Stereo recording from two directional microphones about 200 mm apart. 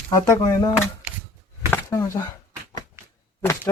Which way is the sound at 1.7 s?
15° left (ahead or behind).